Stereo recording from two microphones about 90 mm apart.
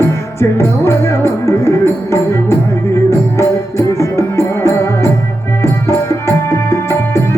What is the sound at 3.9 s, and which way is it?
Music, 35° left (ahead or behind).